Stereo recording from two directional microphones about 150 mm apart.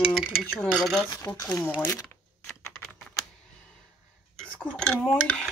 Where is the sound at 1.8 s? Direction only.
5° left (ahead or behind).